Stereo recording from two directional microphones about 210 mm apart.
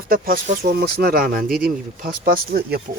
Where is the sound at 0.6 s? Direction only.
50° right (ahead or behind).